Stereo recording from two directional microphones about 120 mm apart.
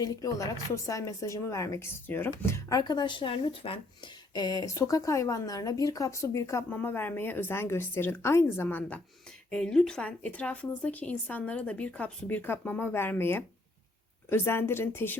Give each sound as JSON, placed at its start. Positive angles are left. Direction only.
{"t": 0.0, "sound": "speech", "side_deg": 30}
{"t": 4.4, "sound": "a woman's voice", "side_deg": 30}